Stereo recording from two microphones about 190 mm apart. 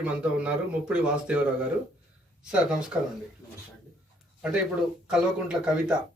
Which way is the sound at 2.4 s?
5° right (ahead or behind).